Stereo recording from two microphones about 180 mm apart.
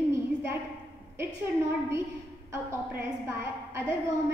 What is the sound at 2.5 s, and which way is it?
A woman's voice, 15° right (ahead or behind).